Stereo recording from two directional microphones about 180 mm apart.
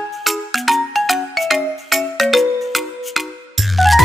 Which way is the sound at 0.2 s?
Centre (ahead or behind).